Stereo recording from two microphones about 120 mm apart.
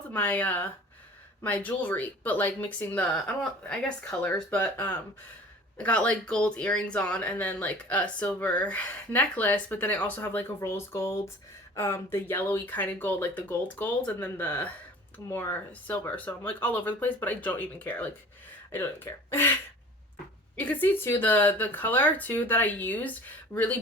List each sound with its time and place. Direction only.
0.1 s speech: 15° left (ahead or behind)
19.3 s speech: 20° left (ahead or behind)
20.6 s speech: 15° left (ahead or behind)